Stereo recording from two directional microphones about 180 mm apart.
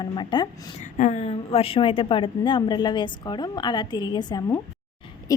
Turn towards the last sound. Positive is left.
turn(degrees=20)  # may be behind; listen again after turning